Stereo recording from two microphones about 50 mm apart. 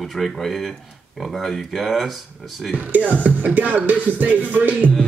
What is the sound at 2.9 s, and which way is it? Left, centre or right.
Music, right.